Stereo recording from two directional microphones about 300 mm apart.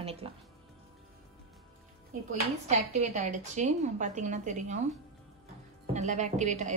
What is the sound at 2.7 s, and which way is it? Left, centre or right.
Speech, right.